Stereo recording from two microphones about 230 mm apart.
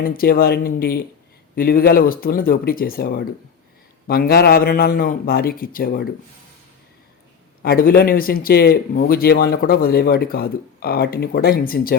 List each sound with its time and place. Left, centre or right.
0.0 s a man's voice: left
7.6 s a man's voice: left